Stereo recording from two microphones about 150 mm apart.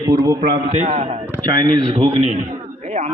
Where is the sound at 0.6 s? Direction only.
50° right (ahead or behind).